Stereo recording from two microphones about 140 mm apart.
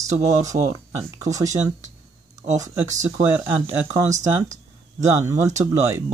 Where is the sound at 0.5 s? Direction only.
55° right (ahead or behind).